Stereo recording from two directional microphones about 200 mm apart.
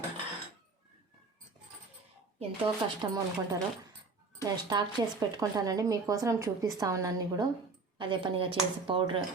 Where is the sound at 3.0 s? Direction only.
20° right (ahead or behind).